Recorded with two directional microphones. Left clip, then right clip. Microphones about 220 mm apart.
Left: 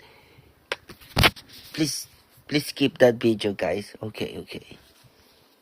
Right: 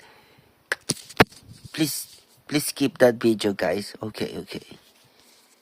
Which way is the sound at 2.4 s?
65° right (ahead or behind).